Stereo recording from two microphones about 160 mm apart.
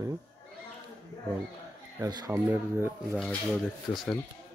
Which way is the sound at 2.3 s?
10° right (ahead or behind).